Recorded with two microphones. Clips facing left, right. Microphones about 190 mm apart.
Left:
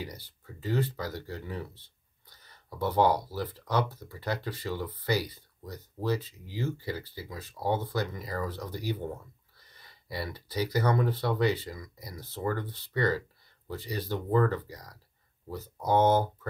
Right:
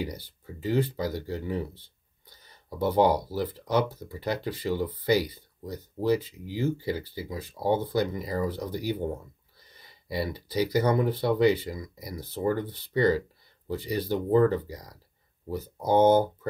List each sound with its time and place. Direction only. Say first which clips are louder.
0.1 s speech: right 6 dB; 25° right (ahead or behind)
2.8 s speech: right 3 dB; 20° right (ahead or behind)